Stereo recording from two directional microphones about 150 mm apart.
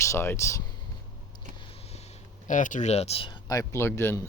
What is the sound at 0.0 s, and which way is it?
Speech, 20° left (ahead or behind).